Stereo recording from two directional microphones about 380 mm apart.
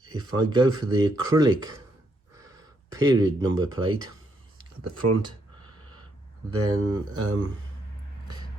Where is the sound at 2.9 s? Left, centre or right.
Centre.